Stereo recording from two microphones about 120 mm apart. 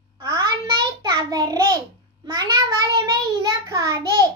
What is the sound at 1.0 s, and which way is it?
A child's voice, 30° right (ahead or behind).